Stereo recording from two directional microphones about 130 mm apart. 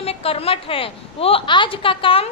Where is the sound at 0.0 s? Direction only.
50° left (ahead or behind).